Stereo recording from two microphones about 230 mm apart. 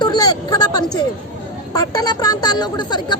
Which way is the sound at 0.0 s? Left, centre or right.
Centre.